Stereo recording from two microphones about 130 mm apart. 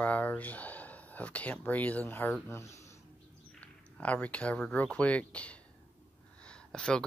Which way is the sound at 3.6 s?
10° left (ahead or behind).